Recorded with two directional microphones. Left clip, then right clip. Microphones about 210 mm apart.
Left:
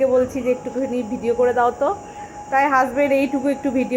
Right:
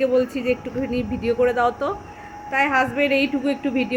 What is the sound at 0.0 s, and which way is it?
Speech, 10° right (ahead or behind).